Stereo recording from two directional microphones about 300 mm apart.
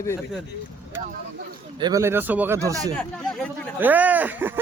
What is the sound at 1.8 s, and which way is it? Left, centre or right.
Speech, centre.